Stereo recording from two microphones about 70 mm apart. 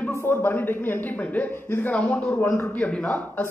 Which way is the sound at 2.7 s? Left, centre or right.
Left.